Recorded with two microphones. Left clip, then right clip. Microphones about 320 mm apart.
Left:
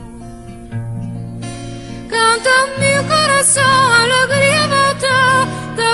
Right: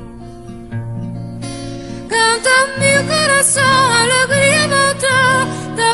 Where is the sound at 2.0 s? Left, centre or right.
Centre.